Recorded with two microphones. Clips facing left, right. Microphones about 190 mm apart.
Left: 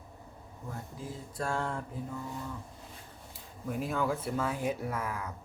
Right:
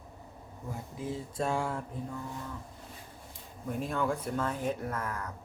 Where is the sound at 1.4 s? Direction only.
20° right (ahead or behind).